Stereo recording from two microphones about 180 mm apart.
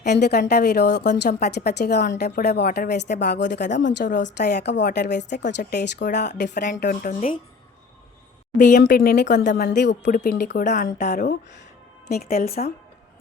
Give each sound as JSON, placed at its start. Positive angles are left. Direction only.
{"t": 0.0, "sound": "a woman's voice", "side_deg": 65}
{"t": 6.8, "sound": "speech", "side_deg": 50}
{"t": 8.5, "sound": "speech", "side_deg": 45}
{"t": 9.6, "sound": "a woman's voice", "side_deg": 70}
{"t": 10.1, "sound": "speech", "side_deg": 50}
{"t": 12.0, "sound": "speech", "side_deg": 60}